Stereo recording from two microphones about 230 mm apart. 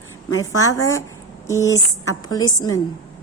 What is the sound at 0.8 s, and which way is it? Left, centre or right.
Speech, centre.